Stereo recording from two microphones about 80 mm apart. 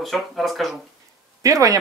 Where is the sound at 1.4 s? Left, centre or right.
Right.